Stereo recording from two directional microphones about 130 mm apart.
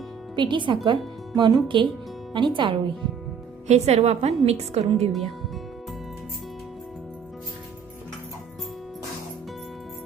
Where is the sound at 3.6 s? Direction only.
55° right (ahead or behind).